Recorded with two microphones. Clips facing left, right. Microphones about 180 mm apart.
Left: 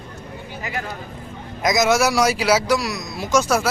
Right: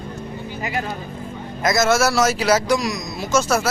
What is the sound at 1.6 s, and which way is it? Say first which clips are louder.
Speech: even; 15° left (ahead or behind).